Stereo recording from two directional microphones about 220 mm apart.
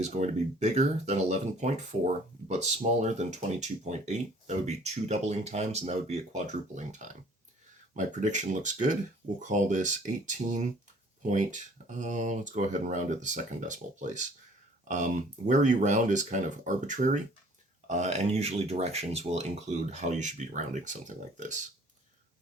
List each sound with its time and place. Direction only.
0.0 s speech: 30° right (ahead or behind)